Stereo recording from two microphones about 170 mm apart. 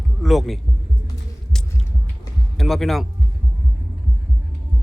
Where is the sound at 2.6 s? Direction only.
Centre (ahead or behind).